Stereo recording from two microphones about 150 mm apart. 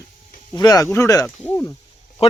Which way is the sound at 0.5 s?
25° left (ahead or behind).